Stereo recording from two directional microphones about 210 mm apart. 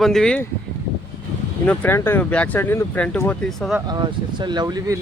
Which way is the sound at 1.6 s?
10° left (ahead or behind).